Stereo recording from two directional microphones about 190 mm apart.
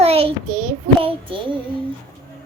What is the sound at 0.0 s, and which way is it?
Child singing, 30° right (ahead or behind).